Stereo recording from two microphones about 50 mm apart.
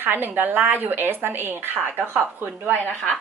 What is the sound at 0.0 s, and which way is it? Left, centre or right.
Speech, right.